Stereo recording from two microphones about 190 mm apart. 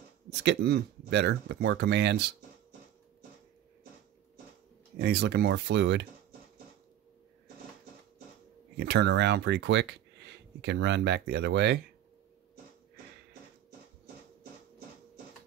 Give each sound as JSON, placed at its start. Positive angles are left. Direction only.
{"t": 0.3, "sound": "speech", "side_deg": -65}
{"t": 4.9, "sound": "speech", "side_deg": -60}
{"t": 8.7, "sound": "speech", "side_deg": -60}